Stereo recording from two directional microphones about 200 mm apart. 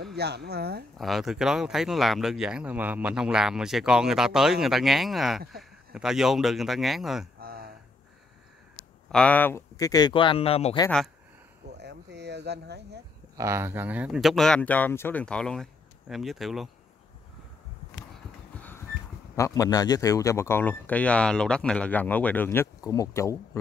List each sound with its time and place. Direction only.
0.0 s speech: 55° right (ahead or behind)
0.9 s speech: centre (ahead or behind)
7.3 s a sound: 50° right (ahead or behind)
9.1 s speech: 5° left (ahead or behind); by 10.8 s 30° left (ahead or behind)
11.8 s speech: 60° right (ahead or behind)
13.4 s speech: 15° right (ahead or behind)
18.6 s a sound: 10° left (ahead or behind)
19.3 s a man's voice: 15° left (ahead or behind)